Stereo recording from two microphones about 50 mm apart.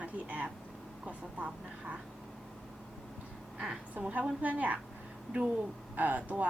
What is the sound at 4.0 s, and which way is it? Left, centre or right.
Speech, right.